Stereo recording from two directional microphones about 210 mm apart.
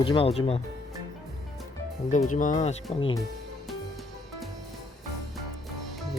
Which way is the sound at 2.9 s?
25° left (ahead or behind).